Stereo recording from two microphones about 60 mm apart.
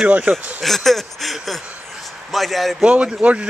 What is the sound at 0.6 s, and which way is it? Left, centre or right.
Speech, centre.